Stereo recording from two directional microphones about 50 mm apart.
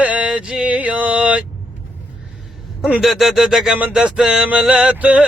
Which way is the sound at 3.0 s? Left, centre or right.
Centre.